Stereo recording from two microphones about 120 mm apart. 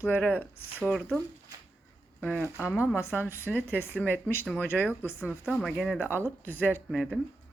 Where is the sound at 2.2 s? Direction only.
10° left (ahead or behind).